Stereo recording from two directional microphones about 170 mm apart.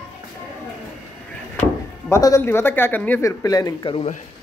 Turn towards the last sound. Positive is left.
turn(degrees=30)  # may be behind; listen again after turning